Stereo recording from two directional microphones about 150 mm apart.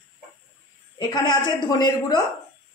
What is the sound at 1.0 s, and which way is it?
A woman's voice, 25° left (ahead or behind).